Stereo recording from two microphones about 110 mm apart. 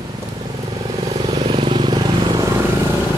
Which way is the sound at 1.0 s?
65° right (ahead or behind).